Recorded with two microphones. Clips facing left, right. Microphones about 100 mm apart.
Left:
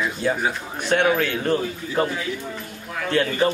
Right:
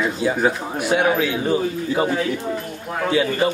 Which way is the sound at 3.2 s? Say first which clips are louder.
Right 1 dB; 10° right (ahead or behind).